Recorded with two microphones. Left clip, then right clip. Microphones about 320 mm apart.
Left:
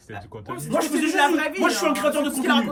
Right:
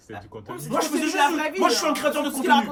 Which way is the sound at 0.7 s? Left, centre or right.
Centre.